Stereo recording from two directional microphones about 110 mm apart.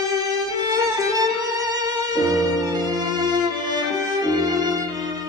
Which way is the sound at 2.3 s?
35° right (ahead or behind).